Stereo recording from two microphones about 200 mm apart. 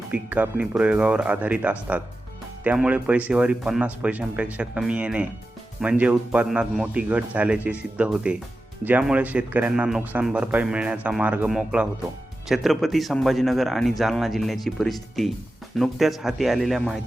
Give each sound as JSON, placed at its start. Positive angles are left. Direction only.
{"t": 0.1, "sound": "speech", "side_deg": -10}